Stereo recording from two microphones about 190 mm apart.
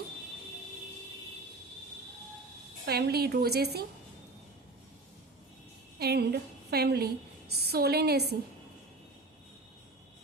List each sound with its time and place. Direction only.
2.8 s a woman's voice: 55° right (ahead or behind)
6.0 s a woman's voice: 60° right (ahead or behind)